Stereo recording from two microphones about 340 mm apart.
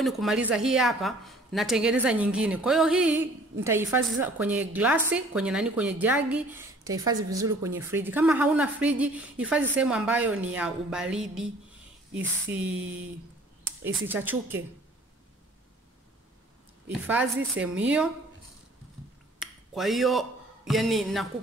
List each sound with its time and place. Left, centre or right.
0.0 s a woman's voice: centre
12.4 s a woman's voice: centre
13.8 s a woman's voice: centre
16.8 s a woman's voice: centre
19.4 s speech: centre